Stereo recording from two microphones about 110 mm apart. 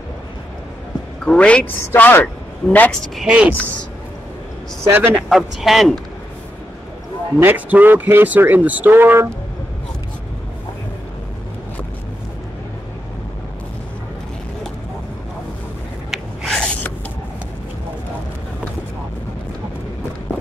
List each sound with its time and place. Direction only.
1.2 s a woman's voice: 10° left (ahead or behind)
2.9 s speech: 5° left (ahead or behind)
3.3 s speech: 10° right (ahead or behind)
4.8 s speech: 20° right (ahead or behind)
5.1 s speech: 5° right (ahead or behind)
7.3 s speech: 15° right (ahead or behind)
16.1 s a sound: 5° left (ahead or behind)